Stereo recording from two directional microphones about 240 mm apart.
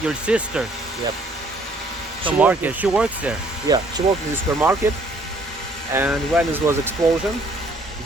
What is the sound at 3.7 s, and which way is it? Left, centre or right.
Speech, centre.